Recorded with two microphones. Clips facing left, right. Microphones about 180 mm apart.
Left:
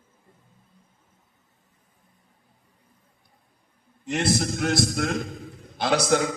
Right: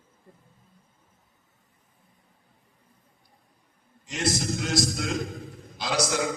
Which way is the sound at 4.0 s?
60° left (ahead or behind).